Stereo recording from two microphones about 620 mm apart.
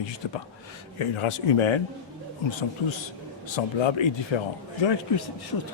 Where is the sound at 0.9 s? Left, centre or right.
Left.